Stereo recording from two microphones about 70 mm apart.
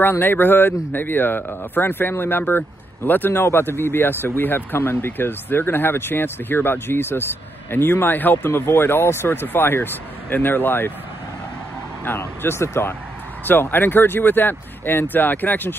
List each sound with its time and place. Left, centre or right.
0.0 s speech: left
12.0 s speech: left
13.5 s speech: left